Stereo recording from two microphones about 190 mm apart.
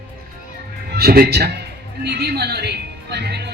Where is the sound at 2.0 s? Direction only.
60° right (ahead or behind).